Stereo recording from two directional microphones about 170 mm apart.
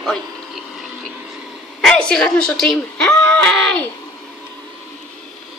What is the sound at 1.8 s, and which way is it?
Speech, 5° left (ahead or behind).